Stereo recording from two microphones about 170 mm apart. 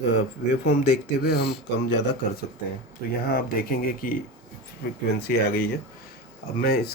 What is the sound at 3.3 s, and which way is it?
Speech, 60° left (ahead or behind).